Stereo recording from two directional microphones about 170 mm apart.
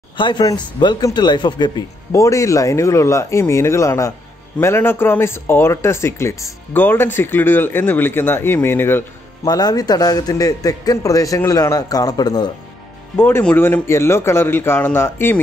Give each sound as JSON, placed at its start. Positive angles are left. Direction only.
{"t": 0.2, "sound": "speech", "side_deg": 25}
{"t": 13.1, "sound": "speech", "side_deg": 10}